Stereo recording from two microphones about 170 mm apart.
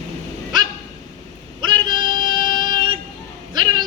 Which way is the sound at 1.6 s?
30° right (ahead or behind).